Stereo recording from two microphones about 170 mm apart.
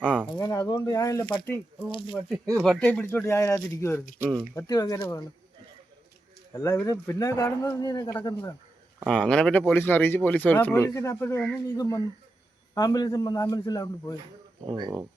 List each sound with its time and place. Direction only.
0.3 s speech: 25° left (ahead or behind)
2.6 s speech: 5° left (ahead or behind)
6.5 s speech: 15° left (ahead or behind)
9.0 s speech: 5° left (ahead or behind); by 14.2 s 20° left (ahead or behind)
14.7 s speech: 25° right (ahead or behind)